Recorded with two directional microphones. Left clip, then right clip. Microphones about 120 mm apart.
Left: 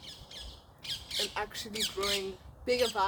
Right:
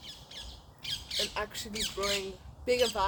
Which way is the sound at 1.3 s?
10° left (ahead or behind).